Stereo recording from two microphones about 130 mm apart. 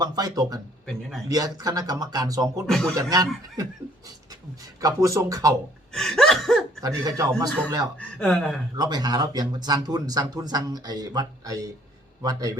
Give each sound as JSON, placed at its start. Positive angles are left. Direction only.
{"t": 0.0, "sound": "speech", "side_deg": -30}
{"t": 2.6, "sound": "speech", "side_deg": 5}
{"t": 2.9, "sound": "speech", "side_deg": -25}
{"t": 4.8, "sound": "speech", "side_deg": -25}
{"t": 5.9, "sound": "laughter", "side_deg": 5}
{"t": 6.8, "sound": "speech", "side_deg": -25}
{"t": 7.9, "sound": "speech", "side_deg": 10}
{"t": 8.7, "sound": "speech", "side_deg": -30}